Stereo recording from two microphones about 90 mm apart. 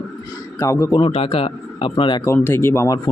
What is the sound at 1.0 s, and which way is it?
Speech, 85° left.